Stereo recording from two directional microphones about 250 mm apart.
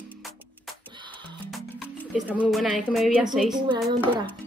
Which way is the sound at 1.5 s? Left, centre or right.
Centre.